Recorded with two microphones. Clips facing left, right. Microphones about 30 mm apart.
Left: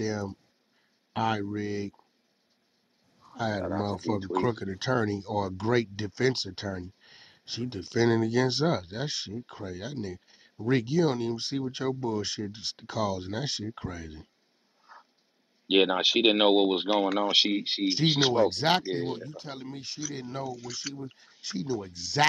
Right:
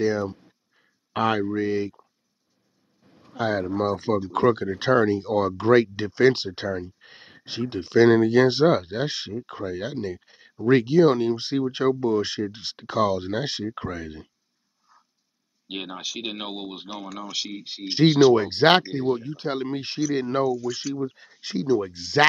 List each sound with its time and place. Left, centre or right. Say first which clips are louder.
0.0 s speech: right 8 dB; right
3.1 s a sound: right 3 dB; right
3.3 s speech: right 5 dB; centre
14.9 s a sound: left 7 dB; left
15.7 s speech: left 10 dB; left
18.4 s speech: right 6 dB; right
18.9 s speech: right 8 dB; centre
19.2 s speech: right 11 dB; right
20.4 s speech: right 12 dB; centre
21.4 s speech: right 9 dB; right